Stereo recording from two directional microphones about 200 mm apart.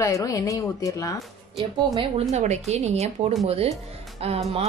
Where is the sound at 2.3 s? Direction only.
35° right (ahead or behind).